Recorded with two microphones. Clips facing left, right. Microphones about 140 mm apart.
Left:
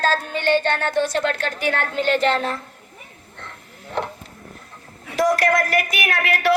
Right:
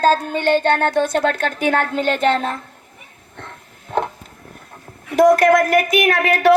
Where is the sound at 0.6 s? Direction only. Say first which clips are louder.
Right 4 dB; 50° right (ahead or behind).